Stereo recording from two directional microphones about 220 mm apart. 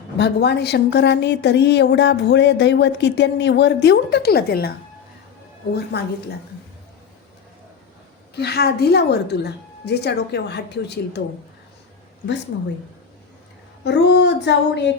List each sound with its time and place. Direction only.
0.2 s a woman's voice: 50° left (ahead or behind)
5.7 s a woman's voice: 45° left (ahead or behind)
8.4 s a woman's voice: 45° left (ahead or behind)
13.8 s a woman's voice: 50° left (ahead or behind)